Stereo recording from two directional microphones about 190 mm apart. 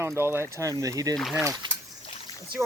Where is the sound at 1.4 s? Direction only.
15° right (ahead or behind).